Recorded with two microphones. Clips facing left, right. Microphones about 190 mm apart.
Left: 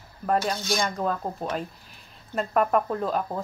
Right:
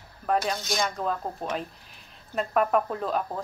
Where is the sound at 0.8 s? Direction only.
Centre (ahead or behind).